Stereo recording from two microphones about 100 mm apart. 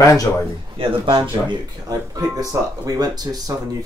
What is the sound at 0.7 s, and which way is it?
Speech, 60° right (ahead or behind).